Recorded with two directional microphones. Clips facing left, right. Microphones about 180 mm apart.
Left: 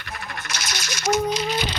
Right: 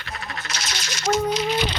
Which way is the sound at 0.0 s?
50° left (ahead or behind).